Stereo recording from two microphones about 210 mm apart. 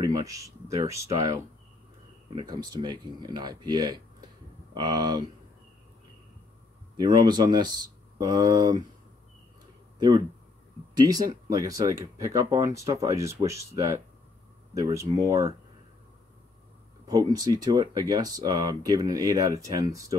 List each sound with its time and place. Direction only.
0.0 s speech: 15° right (ahead or behind)
7.0 s speech: 20° right (ahead or behind)
9.9 s speech: 20° right (ahead or behind)
17.3 s speech: 20° right (ahead or behind)